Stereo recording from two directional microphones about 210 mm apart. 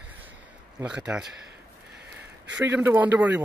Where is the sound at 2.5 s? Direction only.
10° right (ahead or behind).